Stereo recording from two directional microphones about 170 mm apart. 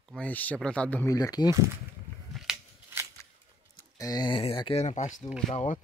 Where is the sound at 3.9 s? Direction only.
20° left (ahead or behind); by 5.8 s 50° left (ahead or behind).